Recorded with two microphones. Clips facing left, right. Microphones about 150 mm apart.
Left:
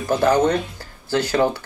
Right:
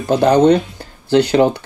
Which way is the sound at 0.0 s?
20° right (ahead or behind).